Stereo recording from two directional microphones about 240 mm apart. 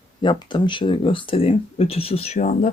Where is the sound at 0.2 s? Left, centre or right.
Centre.